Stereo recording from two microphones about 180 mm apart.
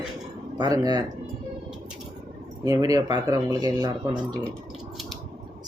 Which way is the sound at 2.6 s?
20° right (ahead or behind).